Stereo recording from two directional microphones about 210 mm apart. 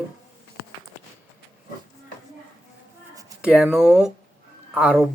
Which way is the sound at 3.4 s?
5° right (ahead or behind).